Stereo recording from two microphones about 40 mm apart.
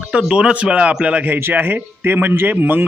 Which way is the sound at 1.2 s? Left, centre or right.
Right.